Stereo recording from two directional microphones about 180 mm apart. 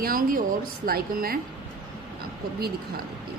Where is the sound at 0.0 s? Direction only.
50° right (ahead or behind).